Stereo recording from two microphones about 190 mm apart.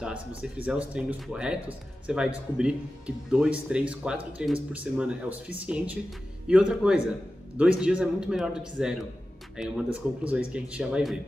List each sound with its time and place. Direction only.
0.4 s speech: 5° right (ahead or behind)